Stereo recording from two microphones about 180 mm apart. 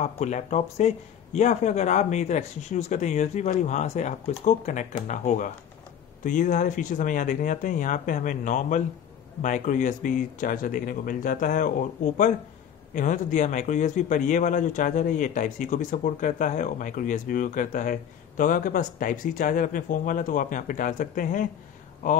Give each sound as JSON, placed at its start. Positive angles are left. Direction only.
{"t": 0.0, "sound": "a man's voice", "side_deg": 40}